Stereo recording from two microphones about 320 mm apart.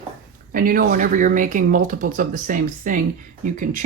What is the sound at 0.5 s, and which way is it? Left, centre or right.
Speech, right.